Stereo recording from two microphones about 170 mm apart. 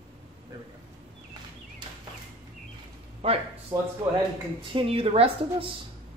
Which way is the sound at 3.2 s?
35° right (ahead or behind).